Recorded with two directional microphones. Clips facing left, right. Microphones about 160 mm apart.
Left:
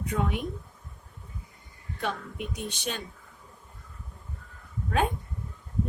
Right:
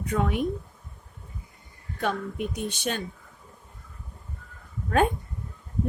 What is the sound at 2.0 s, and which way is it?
Speech, 50° right (ahead or behind).